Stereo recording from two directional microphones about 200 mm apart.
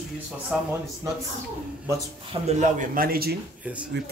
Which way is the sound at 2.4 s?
40° right (ahead or behind).